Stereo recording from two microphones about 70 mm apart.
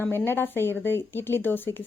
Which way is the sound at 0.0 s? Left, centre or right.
Left.